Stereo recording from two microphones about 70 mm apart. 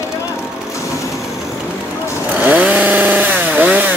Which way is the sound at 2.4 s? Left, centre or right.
Right.